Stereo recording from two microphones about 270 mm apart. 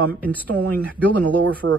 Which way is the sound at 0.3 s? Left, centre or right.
Centre.